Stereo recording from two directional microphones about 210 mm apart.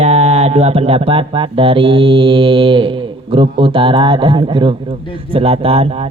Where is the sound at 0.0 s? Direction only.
30° right (ahead or behind).